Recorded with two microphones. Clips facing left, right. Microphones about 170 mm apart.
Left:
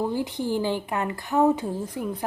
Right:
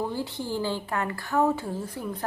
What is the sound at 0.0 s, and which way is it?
A woman's voice, 15° left (ahead or behind).